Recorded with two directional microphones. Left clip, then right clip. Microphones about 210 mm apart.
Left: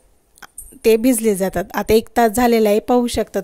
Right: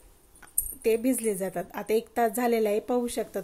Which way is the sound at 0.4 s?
45° left (ahead or behind).